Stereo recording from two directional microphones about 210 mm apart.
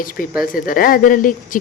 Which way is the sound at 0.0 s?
40° left (ahead or behind).